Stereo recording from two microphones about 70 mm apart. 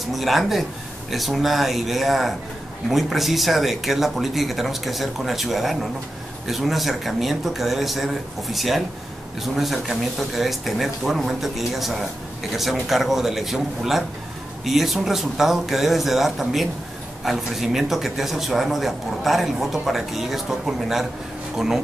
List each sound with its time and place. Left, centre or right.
0.1 s a man's voice: centre